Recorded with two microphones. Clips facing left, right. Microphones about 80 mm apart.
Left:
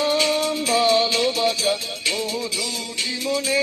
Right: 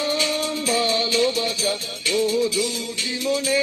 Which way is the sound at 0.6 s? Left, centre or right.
Right.